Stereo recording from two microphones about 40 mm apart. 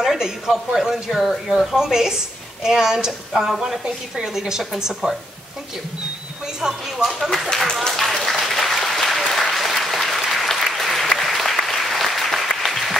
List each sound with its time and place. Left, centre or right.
0.2 s a man's voice: centre
3.8 s a woman's voice: centre
6.4 s a man's voice: centre
7.5 s speech: centre
8.0 s applause: centre